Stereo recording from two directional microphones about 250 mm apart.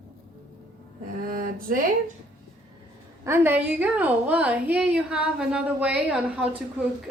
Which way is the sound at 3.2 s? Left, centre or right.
Centre.